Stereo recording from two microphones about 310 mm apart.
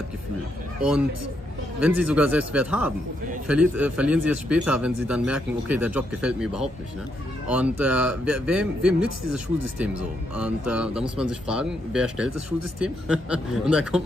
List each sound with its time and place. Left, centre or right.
1.8 s a man's voice: centre